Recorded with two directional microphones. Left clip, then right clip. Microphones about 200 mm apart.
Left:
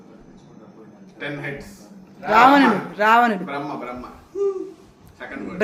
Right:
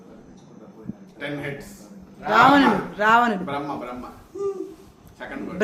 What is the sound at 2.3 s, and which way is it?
A man's voice, 10° left (ahead or behind).